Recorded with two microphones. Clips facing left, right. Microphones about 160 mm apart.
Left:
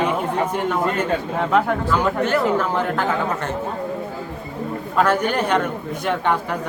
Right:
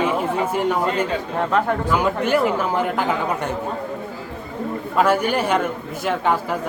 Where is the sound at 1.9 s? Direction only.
10° right (ahead or behind).